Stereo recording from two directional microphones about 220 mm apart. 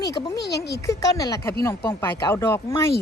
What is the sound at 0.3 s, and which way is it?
Speech, 50° left (ahead or behind).